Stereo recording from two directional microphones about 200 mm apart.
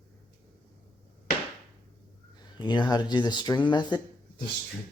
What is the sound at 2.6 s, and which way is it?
Speech, 20° left (ahead or behind).